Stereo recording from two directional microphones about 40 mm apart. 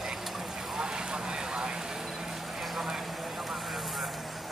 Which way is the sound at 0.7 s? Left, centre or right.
Centre.